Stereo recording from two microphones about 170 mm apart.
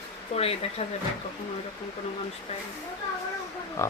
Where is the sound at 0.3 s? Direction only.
35° left (ahead or behind).